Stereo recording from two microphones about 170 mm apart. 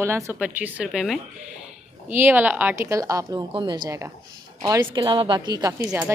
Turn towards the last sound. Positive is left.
turn(degrees=-10)  # may be behind; listen again after turning